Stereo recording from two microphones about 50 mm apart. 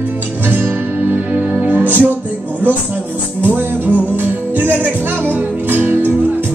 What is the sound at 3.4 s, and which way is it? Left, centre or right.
Music, right.